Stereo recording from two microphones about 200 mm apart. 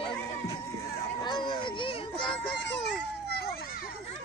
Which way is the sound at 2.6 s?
60° left (ahead or behind).